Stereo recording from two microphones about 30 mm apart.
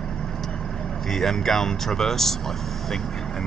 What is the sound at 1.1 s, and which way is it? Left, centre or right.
Speech, centre.